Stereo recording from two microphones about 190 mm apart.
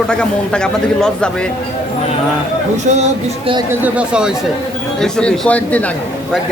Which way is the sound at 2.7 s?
35° right (ahead or behind).